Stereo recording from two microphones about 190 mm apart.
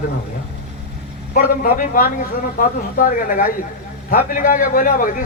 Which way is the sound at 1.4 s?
45° left (ahead or behind).